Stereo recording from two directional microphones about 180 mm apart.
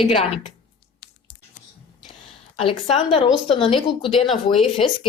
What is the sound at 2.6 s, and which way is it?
A woman's voice, 35° left (ahead or behind).